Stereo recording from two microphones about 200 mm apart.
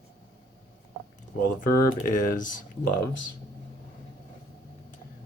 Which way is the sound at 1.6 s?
40° left (ahead or behind).